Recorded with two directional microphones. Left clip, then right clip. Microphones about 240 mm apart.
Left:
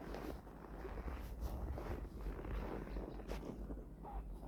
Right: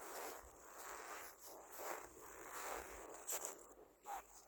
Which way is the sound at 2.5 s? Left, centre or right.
Right.